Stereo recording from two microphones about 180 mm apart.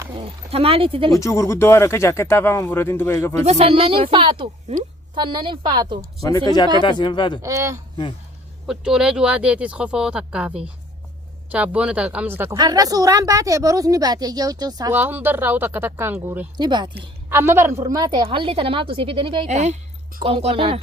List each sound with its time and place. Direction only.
0.2 s speech: 35° right (ahead or behind)
1.2 s speech: 15° left (ahead or behind)
3.4 s a woman's voice: 35° right (ahead or behind)
6.2 s speech: 20° left (ahead or behind)
7.4 s speech: 15° right (ahead or behind)
8.6 s a woman's voice: 5° right (ahead or behind)
16.6 s a woman's voice: 25° right (ahead or behind)
17.2 s a woman's voice: 15° right (ahead or behind); by 20.7 s 30° right (ahead or behind)